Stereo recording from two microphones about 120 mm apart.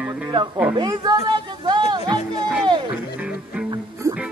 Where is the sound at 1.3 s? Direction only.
40° right (ahead or behind).